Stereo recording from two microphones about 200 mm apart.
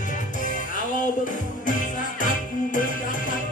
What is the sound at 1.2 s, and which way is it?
Music, 40° left (ahead or behind).